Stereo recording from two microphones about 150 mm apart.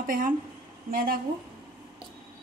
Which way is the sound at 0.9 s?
75° right (ahead or behind).